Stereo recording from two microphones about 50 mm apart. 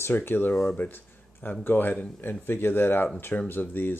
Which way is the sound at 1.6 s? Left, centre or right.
Left.